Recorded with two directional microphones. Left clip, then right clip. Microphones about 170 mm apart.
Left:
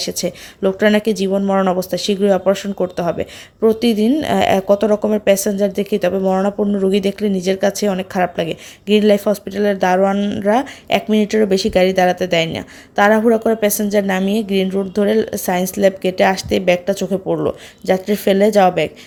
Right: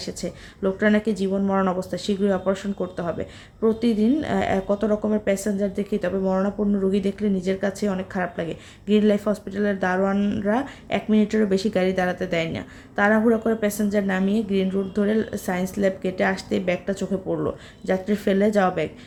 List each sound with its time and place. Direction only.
0.0 s speech: 40° left (ahead or behind)